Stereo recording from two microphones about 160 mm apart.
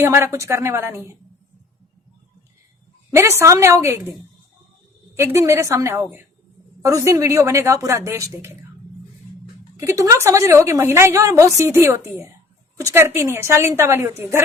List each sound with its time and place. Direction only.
0.0 s a woman's voice: 15° right (ahead or behind)
3.1 s a woman's voice: 15° right (ahead or behind)
5.1 s a woman's voice: 15° right (ahead or behind)
9.7 s a woman's voice: 20° right (ahead or behind)